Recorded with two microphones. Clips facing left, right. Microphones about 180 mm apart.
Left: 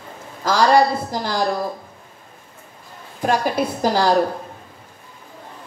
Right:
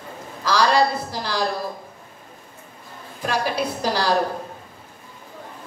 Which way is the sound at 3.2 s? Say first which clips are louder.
Left 4 dB; 45° left (ahead or behind).